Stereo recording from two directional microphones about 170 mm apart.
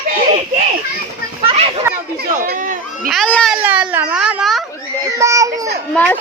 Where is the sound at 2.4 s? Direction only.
55° right (ahead or behind).